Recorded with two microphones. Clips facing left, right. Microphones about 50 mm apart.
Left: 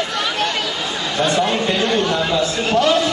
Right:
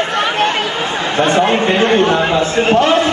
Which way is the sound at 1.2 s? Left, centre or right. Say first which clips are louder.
Right 5 dB; right.